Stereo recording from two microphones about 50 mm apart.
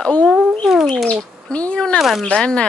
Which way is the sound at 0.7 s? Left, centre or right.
Centre.